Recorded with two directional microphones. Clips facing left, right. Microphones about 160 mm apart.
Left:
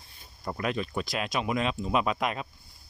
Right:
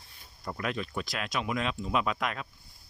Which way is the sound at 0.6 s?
5° left (ahead or behind).